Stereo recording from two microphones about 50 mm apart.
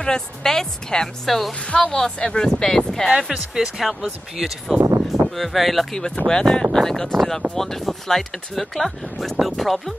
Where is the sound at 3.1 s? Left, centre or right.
Centre.